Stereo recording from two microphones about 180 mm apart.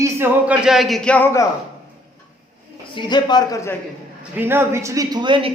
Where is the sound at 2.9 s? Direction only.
25° left (ahead or behind).